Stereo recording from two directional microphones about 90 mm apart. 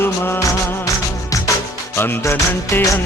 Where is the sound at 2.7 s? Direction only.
30° left (ahead or behind).